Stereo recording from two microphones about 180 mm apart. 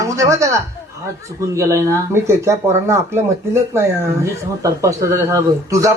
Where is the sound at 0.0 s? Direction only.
15° right (ahead or behind).